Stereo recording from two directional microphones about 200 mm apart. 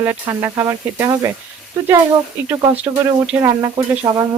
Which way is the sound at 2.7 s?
10° right (ahead or behind).